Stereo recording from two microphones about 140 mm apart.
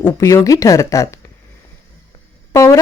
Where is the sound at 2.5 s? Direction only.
20° left (ahead or behind).